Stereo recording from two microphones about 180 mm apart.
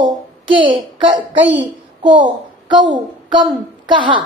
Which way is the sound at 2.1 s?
25° right (ahead or behind).